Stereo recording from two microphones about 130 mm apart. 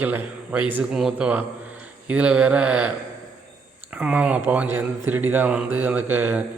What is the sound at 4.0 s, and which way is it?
Speech, 10° right (ahead or behind).